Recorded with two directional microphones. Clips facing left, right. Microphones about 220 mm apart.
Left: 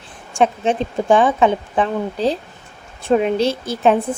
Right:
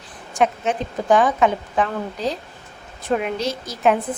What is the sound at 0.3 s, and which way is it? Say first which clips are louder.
A woman's voice: left 3 dB; 30° left (ahead or behind).